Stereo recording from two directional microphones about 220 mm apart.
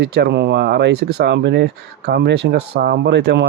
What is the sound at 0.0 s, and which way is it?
Speech, 50° right (ahead or behind).